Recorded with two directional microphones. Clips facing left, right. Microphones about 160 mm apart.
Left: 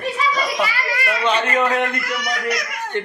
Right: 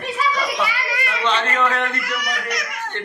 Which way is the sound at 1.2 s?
15° left (ahead or behind).